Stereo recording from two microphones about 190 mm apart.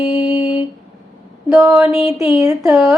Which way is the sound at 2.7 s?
Centre (ahead or behind).